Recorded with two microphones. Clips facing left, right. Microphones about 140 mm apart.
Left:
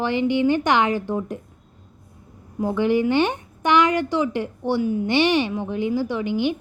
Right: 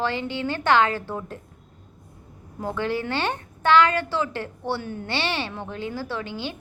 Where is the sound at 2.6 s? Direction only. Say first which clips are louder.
Left 7 dB; 15° left (ahead or behind).